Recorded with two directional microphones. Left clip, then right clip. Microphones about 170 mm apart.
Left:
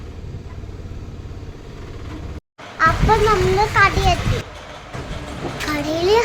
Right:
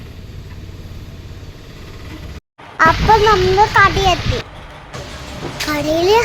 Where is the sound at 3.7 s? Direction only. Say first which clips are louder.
Right 4 dB; 20° right (ahead or behind).